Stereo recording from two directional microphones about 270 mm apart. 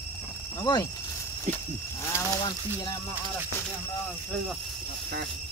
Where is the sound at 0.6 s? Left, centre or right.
Centre.